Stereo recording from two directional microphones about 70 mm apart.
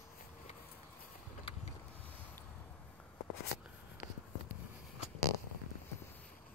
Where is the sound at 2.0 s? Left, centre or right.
Left.